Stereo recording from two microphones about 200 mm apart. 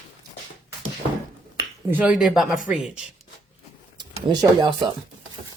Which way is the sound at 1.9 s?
10° right (ahead or behind).